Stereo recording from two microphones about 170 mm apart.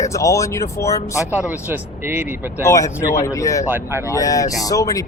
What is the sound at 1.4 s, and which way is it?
Speech, 10° right (ahead or behind).